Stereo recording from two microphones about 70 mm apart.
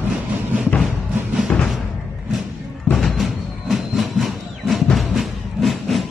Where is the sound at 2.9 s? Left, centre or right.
Centre.